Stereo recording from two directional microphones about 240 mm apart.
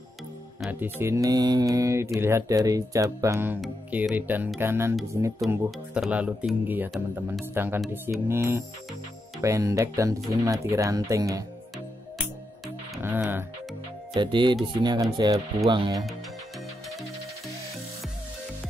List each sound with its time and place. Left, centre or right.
0.6 s speech: centre
12.6 s music: centre
14.1 s speech: centre